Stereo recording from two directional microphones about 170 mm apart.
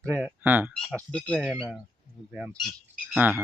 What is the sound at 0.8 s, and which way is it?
Speech, 5° left (ahead or behind).